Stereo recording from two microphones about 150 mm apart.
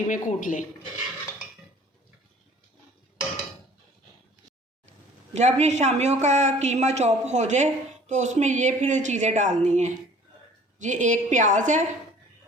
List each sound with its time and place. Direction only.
0.1 s speech: 60° left (ahead or behind)
4.9 s a woman's voice: 50° right (ahead or behind)